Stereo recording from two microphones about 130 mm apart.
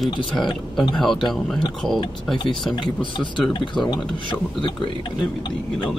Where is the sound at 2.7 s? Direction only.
40° left (ahead or behind).